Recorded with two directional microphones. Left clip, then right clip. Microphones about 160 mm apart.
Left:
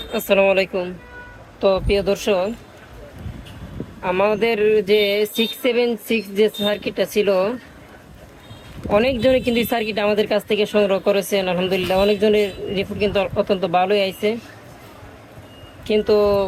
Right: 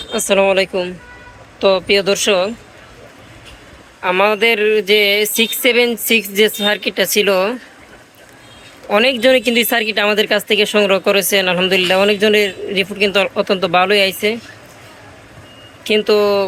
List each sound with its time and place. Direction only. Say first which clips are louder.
0.1 s speech: right 3 dB; 5° right (ahead or behind)
4.0 s speech: right 5 dB; 5° left (ahead or behind)
8.9 s speech: right 4 dB; 10° left (ahead or behind)
15.8 s speech: right 3 dB; 5° left (ahead or behind)